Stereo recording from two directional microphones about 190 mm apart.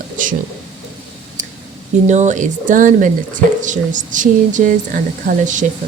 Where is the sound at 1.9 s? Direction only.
40° right (ahead or behind).